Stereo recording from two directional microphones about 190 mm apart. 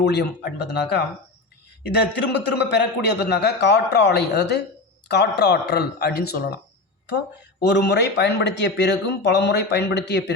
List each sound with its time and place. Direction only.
0.0 s speech: 65° left (ahead or behind)
1.9 s speech: 65° left (ahead or behind)
7.6 s speech: 60° left (ahead or behind)